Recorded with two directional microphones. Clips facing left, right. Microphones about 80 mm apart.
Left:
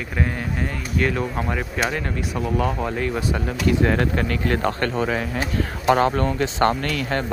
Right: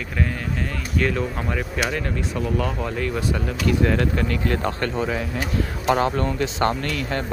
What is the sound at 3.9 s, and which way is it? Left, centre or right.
Speech, left.